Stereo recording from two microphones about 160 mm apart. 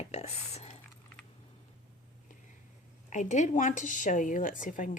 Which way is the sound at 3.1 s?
50° left (ahead or behind).